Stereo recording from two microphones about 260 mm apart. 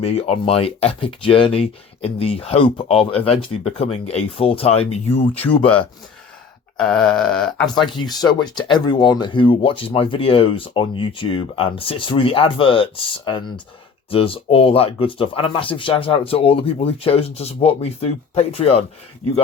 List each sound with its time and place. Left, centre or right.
0.0 s speech: left
6.7 s speech: centre
7.9 s speech: centre